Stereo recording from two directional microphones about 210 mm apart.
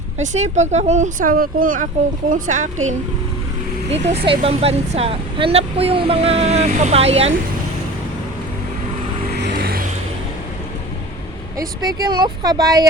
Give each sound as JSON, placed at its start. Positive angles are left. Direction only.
{"t": 0.2, "sound": "speech", "side_deg": -35}
{"t": 3.8, "sound": "speech", "side_deg": -30}
{"t": 9.4, "sound": "vehicle", "side_deg": -45}
{"t": 11.5, "sound": "speech", "side_deg": -15}